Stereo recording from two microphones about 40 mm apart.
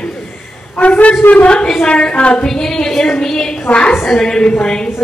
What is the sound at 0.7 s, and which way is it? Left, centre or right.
Speech, left.